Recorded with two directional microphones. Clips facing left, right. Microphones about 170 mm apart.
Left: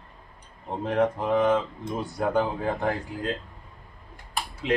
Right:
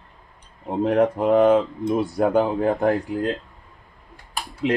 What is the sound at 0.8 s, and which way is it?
Speech, 65° right (ahead or behind).